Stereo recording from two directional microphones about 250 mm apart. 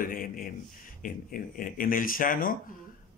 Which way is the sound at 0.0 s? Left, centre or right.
Left.